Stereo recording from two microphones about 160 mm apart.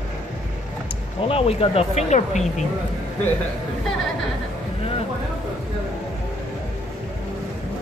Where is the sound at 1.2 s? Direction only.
35° left (ahead or behind).